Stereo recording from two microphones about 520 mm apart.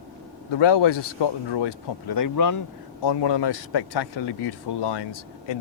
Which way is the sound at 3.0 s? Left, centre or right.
Left.